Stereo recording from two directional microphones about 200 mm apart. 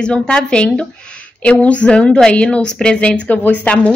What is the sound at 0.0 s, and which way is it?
A woman's voice, 5° left (ahead or behind).